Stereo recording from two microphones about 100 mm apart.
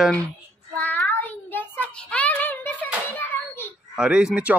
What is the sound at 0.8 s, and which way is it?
Child singing, 15° left (ahead or behind).